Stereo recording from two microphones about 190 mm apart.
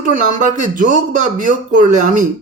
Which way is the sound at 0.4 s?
40° right (ahead or behind).